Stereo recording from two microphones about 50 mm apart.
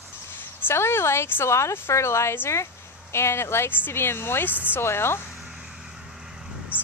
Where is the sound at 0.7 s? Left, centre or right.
Left.